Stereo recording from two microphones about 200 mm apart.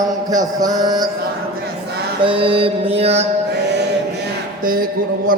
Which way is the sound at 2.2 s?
25° right (ahead or behind).